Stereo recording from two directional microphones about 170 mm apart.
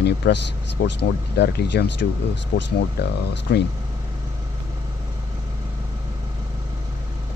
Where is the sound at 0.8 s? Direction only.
85° left.